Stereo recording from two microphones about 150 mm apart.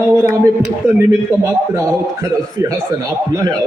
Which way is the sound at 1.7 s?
20° right (ahead or behind).